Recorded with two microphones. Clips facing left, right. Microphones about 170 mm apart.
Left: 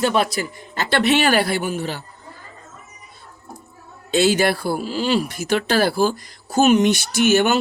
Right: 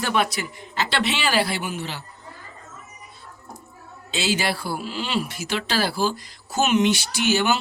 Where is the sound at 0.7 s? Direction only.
50° left (ahead or behind).